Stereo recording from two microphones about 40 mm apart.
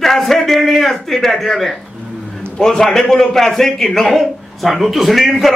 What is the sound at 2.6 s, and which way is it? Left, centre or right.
A man's voice, centre.